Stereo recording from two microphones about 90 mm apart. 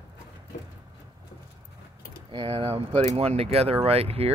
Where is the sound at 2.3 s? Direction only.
80° right.